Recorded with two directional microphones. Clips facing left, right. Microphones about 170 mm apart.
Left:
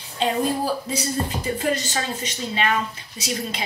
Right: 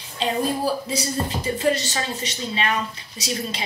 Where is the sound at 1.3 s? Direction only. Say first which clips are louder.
Right 2 dB; 25° right (ahead or behind).